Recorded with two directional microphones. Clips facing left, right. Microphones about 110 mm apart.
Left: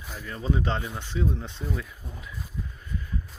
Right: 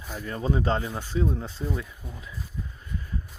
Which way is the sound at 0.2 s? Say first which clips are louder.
Right 2 dB; 40° right (ahead or behind).